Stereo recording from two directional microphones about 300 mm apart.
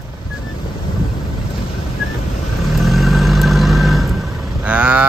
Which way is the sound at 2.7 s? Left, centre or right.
Centre.